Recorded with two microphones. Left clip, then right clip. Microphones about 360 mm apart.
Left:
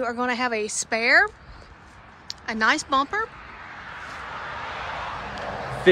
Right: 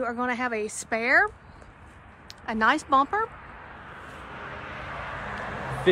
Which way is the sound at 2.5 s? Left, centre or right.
Centre.